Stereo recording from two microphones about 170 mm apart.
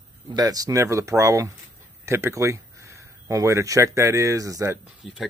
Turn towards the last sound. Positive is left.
turn(degrees=-5)  # may be behind; listen again after turning